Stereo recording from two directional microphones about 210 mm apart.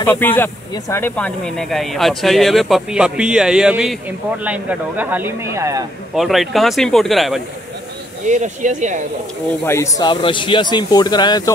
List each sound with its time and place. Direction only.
0.0 s speech: 10° left (ahead or behind); by 5.9 s 15° right (ahead or behind)
6.1 s speech: centre (ahead or behind)
8.3 s speech: 35° right (ahead or behind)
9.7 s speech: 15° left (ahead or behind)